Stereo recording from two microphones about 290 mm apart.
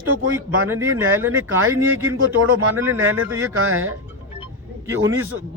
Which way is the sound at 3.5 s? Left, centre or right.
Right.